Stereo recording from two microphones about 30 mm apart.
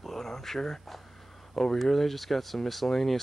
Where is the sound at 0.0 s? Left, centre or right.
Centre.